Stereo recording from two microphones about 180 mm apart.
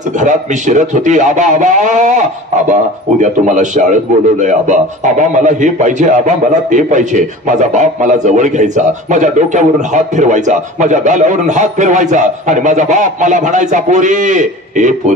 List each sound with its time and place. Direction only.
0.1 s a man's voice: 40° right (ahead or behind)